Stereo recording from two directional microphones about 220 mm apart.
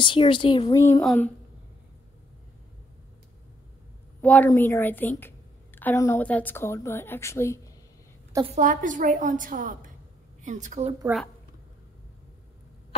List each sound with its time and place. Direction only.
0.0 s a woman's voice: 20° left (ahead or behind); by 1.3 s 5° left (ahead or behind)
4.2 s a woman's voice: 5° left (ahead or behind)
8.5 s a woman's voice: 35° right (ahead or behind)